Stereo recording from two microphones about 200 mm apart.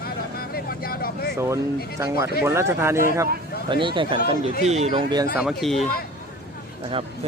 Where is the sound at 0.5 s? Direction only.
50° left (ahead or behind).